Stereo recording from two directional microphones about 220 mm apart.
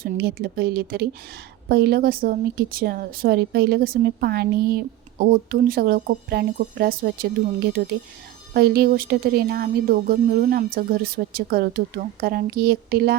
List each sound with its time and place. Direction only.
0.0 s speech: 45° right (ahead or behind)